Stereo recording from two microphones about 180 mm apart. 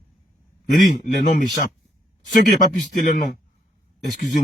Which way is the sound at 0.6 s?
45° left (ahead or behind).